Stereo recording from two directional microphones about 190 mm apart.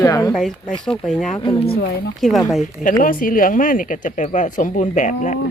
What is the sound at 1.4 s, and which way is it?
Speech, 25° left (ahead or behind).